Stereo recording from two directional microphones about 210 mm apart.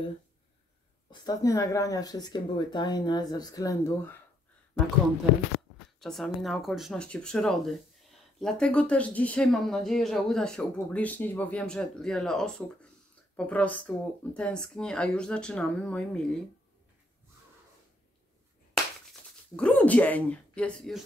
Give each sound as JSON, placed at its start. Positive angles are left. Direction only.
{"t": 1.2, "sound": "speech", "side_deg": 15}
{"t": 5.9, "sound": "speech", "side_deg": 0}
{"t": 19.5, "sound": "speech", "side_deg": 5}